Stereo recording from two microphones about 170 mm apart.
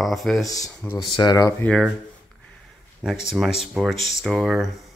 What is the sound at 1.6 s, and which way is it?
Speech, 5° left (ahead or behind).